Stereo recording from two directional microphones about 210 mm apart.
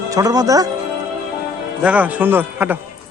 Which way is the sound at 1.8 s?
5° right (ahead or behind).